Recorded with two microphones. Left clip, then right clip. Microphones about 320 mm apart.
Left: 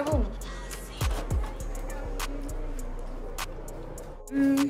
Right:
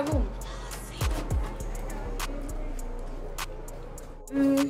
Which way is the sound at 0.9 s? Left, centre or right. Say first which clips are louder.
Even; centre.